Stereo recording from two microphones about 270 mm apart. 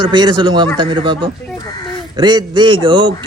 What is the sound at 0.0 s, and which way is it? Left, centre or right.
Speech, centre.